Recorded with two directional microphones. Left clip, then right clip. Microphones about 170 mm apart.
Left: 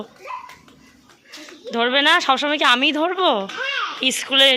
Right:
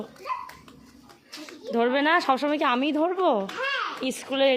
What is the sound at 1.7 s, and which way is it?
A woman's voice, 5° right (ahead or behind).